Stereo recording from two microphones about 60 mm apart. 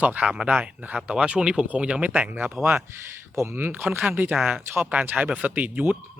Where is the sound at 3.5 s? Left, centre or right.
Right.